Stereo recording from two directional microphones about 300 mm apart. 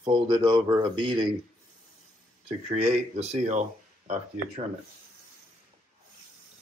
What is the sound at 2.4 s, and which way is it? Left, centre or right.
Speech, right.